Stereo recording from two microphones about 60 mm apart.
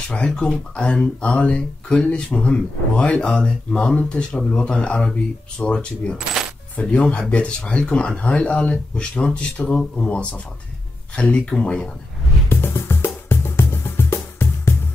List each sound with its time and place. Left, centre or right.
0.1 s speech: centre
12.4 s music: left